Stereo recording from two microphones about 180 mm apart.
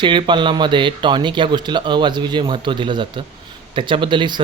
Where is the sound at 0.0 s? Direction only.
25° right (ahead or behind).